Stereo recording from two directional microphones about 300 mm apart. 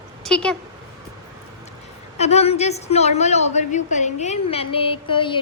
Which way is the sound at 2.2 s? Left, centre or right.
Left.